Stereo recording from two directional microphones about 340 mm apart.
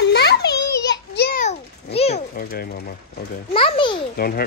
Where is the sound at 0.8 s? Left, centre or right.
Left.